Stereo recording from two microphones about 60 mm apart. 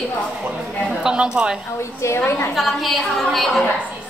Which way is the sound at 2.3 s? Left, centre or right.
Left.